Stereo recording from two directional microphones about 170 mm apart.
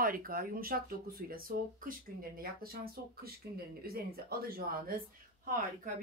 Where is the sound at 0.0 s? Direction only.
60° right (ahead or behind).